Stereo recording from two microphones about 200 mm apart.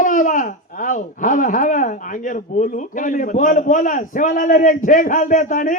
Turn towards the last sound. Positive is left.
turn(degrees=40)  # may be behind; listen again after turning